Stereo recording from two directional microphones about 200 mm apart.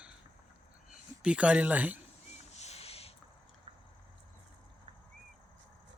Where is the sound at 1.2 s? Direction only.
5° right (ahead or behind).